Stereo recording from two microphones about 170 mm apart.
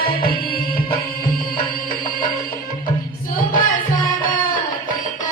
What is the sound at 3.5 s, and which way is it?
Music, 55° left (ahead or behind).